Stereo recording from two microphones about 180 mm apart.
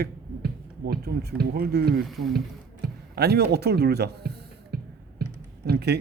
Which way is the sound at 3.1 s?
65° right (ahead or behind).